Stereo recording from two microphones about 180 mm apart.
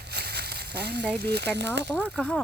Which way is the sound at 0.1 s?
65° right (ahead or behind).